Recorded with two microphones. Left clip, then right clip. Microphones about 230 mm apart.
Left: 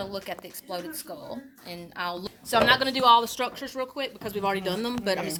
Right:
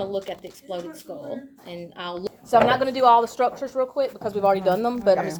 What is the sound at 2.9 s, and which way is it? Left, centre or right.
Speech, left.